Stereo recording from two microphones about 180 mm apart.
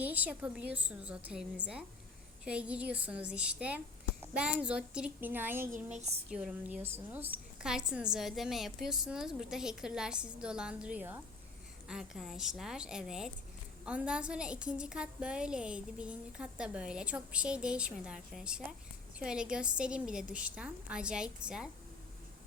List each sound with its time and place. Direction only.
0.0 s a woman's voice: 10° right (ahead or behind)
5.7 s a woman's voice: 40° right (ahead or behind)
6.3 s a woman's voice: 5° right (ahead or behind)